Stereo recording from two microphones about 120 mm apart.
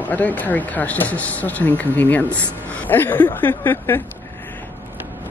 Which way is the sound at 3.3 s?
15° left (ahead or behind).